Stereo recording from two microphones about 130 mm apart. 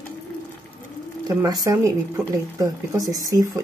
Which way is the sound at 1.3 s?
25° right (ahead or behind).